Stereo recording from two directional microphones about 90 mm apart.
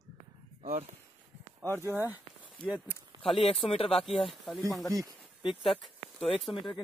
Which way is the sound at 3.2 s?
90° left.